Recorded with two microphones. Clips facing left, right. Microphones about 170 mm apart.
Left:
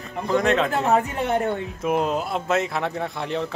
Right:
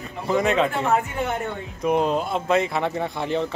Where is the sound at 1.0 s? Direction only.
35° left (ahead or behind).